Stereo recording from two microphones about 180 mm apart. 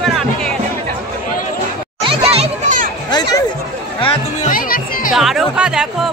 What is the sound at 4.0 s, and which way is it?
Music, 30° left (ahead or behind).